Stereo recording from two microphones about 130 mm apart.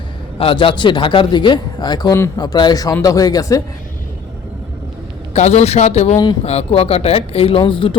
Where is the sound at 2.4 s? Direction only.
35° left (ahead or behind).